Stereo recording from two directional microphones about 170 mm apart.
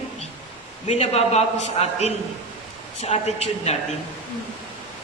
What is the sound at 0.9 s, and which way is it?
A man's voice, 40° left (ahead or behind).